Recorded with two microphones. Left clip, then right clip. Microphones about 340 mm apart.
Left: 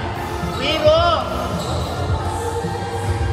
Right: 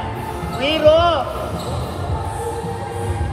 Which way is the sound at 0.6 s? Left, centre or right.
Right.